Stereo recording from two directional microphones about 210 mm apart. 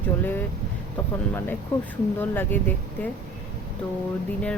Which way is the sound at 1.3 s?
10° left (ahead or behind).